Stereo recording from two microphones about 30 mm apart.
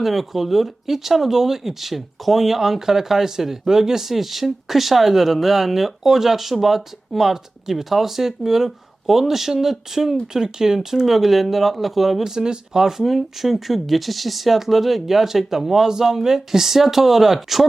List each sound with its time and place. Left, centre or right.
0.0 s speech: centre
12.2 s speech: centre